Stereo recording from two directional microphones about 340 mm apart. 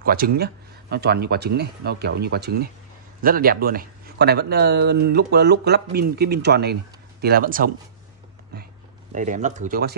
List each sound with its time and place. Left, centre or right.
0.0 s speech: right
9.1 s speech: right